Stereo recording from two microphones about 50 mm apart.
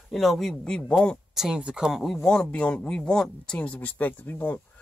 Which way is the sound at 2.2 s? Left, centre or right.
Centre.